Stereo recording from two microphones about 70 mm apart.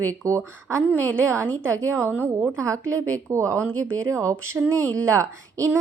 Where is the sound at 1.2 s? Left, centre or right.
Right.